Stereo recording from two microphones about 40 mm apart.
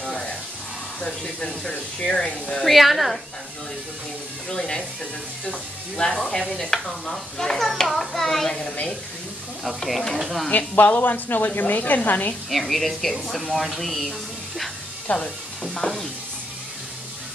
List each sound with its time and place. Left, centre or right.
1.0 s speech: centre
2.6 s a woman's voice: centre
4.5 s speech: centre
10.1 s a woman's voice: centre
10.7 s a woman's voice: left
12.4 s a woman's voice: centre
15.0 s speech: left